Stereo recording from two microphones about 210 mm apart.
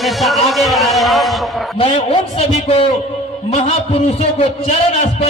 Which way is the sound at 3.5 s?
30° left (ahead or behind).